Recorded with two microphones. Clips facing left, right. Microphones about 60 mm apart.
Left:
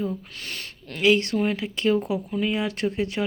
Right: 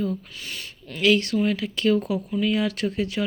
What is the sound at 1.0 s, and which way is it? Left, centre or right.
Speech, left.